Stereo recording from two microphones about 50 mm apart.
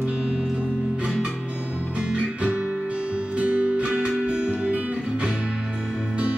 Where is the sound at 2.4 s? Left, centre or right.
Right.